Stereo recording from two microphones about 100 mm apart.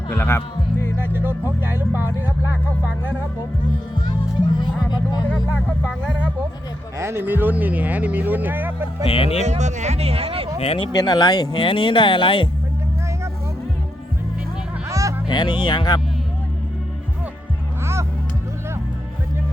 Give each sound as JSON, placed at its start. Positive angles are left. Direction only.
{"t": 0.1, "sound": "music", "side_deg": 20}
{"t": 0.9, "sound": "speech", "side_deg": -20}
{"t": 4.5, "sound": "speech", "side_deg": 45}
{"t": 5.8, "sound": "speech", "side_deg": 10}
{"t": 7.0, "sound": "speech", "side_deg": -25}
{"t": 9.0, "sound": "speech", "side_deg": 70}
{"t": 9.5, "sound": "speech", "side_deg": -90}
{"t": 10.6, "sound": "speech", "side_deg": 80}
{"t": 10.9, "sound": "speech", "side_deg": 45}
{"t": 14.8, "sound": "music", "side_deg": -30}
{"t": 15.3, "sound": "speech", "side_deg": 50}